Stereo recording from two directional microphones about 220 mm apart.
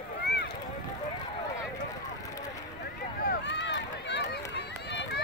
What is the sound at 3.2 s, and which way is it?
Run, 50° left (ahead or behind).